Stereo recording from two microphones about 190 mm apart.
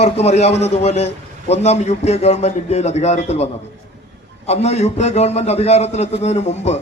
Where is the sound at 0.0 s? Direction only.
35° left (ahead or behind).